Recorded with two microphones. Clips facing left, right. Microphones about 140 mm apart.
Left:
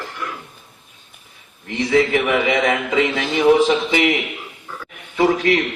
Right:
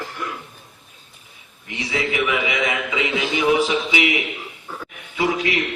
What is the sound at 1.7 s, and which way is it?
A man's voice, 50° left (ahead or behind).